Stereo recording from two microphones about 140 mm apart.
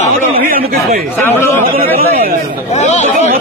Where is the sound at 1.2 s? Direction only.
15° left (ahead or behind).